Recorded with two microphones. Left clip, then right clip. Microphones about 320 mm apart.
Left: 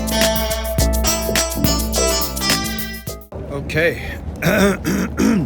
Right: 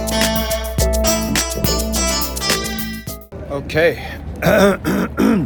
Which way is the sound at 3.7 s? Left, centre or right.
Centre.